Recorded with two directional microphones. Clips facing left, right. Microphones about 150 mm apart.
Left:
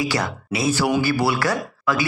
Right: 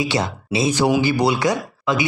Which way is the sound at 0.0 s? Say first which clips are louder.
Right 2 dB; 25° right (ahead or behind).